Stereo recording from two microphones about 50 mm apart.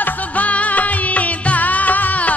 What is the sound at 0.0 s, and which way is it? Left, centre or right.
Music, left.